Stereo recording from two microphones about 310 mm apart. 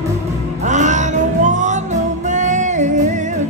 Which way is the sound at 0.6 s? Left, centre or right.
Right.